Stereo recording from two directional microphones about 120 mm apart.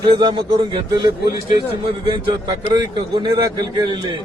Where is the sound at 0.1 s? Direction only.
40° right (ahead or behind).